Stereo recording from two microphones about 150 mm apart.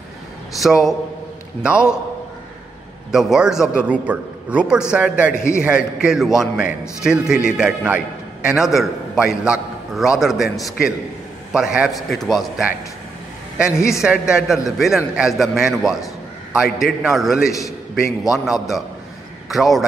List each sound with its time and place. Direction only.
0.6 s a man's voice: centre (ahead or behind)
3.1 s a man's voice: 5° right (ahead or behind)
5.3 s a man's voice: 20° left (ahead or behind)
5.6 s a man's voice: 5° right (ahead or behind)
13.7 s a man's voice: 20° left (ahead or behind)
14.0 s a man's voice: 5° right (ahead or behind)
17.5 s a man's voice: 20° left (ahead or behind)
18.3 s a man's voice: centre (ahead or behind)